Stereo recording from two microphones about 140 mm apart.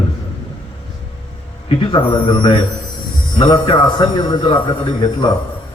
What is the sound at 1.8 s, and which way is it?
A man's voice, 35° left (ahead or behind).